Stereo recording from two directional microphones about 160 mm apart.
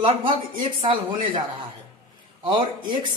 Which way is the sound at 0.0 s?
35° right (ahead or behind).